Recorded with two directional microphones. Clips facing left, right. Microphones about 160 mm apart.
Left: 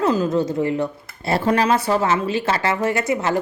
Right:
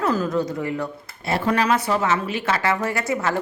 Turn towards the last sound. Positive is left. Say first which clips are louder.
# left 3 dB
turn(degrees=20)  # may be behind; listen again after turning